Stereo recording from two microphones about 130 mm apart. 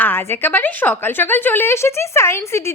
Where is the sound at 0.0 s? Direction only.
15° left (ahead or behind).